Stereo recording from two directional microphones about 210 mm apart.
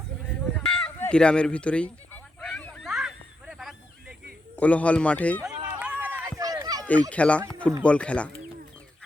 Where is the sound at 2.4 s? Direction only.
5° left (ahead or behind).